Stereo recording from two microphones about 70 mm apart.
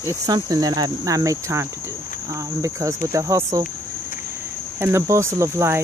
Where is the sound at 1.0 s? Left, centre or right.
Right.